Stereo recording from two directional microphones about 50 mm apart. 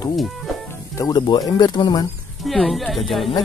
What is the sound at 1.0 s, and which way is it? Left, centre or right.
Speech, left.